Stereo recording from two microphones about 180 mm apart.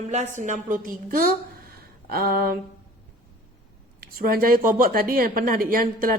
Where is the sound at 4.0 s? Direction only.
55° right (ahead or behind).